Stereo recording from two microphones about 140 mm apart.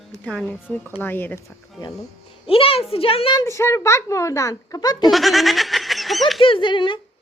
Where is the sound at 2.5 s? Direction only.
40° left (ahead or behind).